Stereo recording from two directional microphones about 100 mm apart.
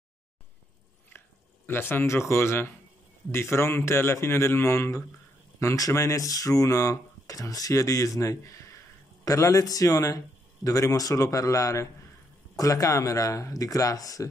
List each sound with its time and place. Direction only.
1.7 s a man's voice: 25° left (ahead or behind)